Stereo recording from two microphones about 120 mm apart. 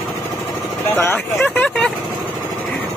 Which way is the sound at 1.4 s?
15° left (ahead or behind).